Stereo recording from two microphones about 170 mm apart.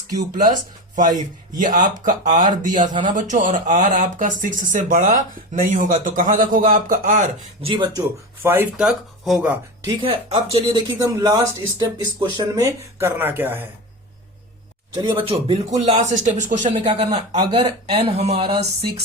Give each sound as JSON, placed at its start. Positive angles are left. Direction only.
{"t": 0.1, "sound": "speech", "side_deg": -50}
{"t": 7.6, "sound": "speech", "side_deg": -25}
{"t": 8.4, "sound": "speech", "side_deg": -10}
{"t": 10.0, "sound": "speech", "side_deg": -35}
{"t": 15.0, "sound": "speech", "side_deg": -30}
{"t": 16.2, "sound": "speech", "side_deg": -45}
{"t": 16.8, "sound": "speech", "side_deg": -35}